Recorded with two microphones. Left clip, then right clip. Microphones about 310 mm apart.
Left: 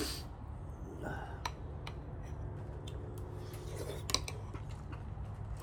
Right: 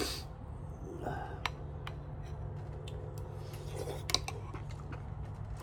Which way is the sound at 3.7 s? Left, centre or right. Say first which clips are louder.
Right 3 dB; centre.